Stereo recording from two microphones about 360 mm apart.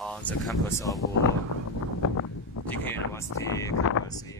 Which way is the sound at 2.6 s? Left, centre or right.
Centre.